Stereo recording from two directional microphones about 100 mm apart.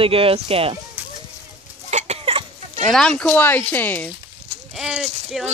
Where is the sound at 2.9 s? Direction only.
5° left (ahead or behind).